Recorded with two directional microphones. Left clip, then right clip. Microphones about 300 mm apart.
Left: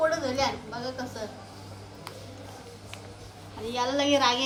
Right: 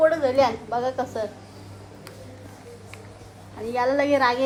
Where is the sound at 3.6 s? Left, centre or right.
Centre.